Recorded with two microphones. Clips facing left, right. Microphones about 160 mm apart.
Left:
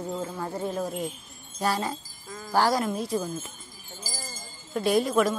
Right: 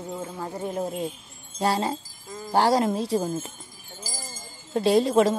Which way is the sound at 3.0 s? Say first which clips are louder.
Right 3 dB; 30° right (ahead or behind).